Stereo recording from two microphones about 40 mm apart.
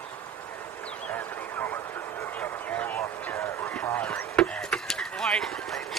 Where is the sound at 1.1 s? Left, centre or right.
Left.